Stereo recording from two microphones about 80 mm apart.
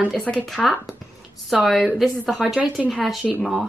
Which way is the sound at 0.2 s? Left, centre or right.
Centre.